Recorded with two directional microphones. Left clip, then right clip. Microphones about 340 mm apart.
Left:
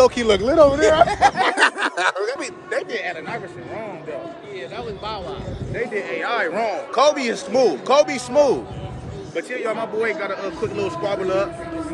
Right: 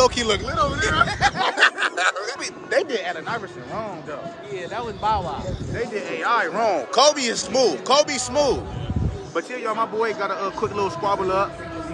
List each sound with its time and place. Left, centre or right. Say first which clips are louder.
0.0 s speech: left 4 dB; centre
0.7 s speech: left 6 dB; centre
3.0 s a man's voice: even; centre
4.7 s speech: right 8 dB; centre
6.2 s speech: right 3 dB; centre
10.0 s a man's voice: even; centre